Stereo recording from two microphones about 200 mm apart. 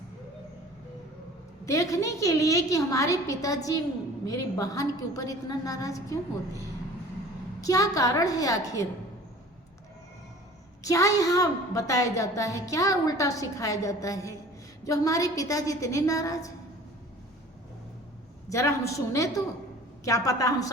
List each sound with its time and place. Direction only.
1.6 s a woman's voice: 15° left (ahead or behind)
7.6 s a woman's voice: 15° left (ahead or behind)
10.8 s a woman's voice: 15° left (ahead or behind)
18.4 s a woman's voice: 15° left (ahead or behind)